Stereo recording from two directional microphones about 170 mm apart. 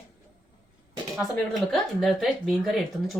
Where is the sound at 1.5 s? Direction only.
Centre (ahead or behind).